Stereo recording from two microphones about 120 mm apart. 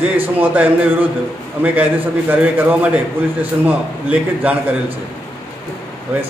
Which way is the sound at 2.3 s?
10° right (ahead or behind).